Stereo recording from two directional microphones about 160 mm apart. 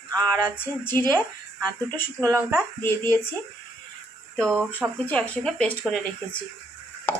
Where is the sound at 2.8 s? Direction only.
15° left (ahead or behind).